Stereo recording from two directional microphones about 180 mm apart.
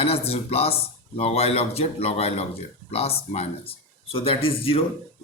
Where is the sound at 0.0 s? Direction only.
35° left (ahead or behind).